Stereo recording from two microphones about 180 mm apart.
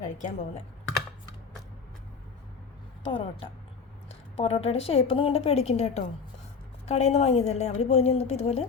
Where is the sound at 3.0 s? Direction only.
30° left (ahead or behind).